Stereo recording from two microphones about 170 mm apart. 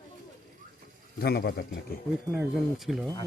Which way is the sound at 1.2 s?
65° left (ahead or behind).